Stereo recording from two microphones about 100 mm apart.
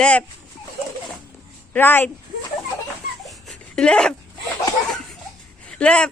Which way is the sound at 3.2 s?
5° left (ahead or behind).